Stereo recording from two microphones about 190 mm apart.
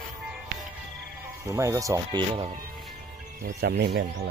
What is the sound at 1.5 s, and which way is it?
Speech, 15° right (ahead or behind).